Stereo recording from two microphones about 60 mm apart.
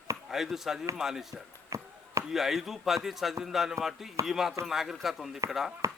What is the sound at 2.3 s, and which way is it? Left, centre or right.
Speech, centre.